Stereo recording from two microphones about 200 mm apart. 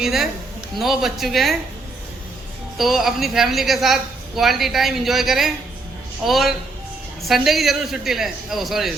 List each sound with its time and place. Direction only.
0.0 s a woman's voice: centre (ahead or behind)
2.7 s a woman's voice: centre (ahead or behind)